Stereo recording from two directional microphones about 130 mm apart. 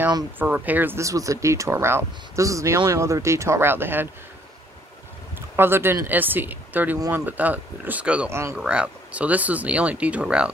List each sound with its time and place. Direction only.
0.4 s speech: 15° right (ahead or behind)
5.6 s speech: 15° right (ahead or behind)
8.3 s speech: 20° right (ahead or behind)
8.5 s speech: 10° right (ahead or behind)